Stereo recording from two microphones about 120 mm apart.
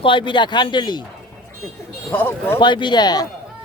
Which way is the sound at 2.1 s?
20° left (ahead or behind).